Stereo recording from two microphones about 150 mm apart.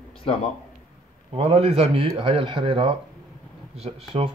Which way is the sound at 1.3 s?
40° right (ahead or behind).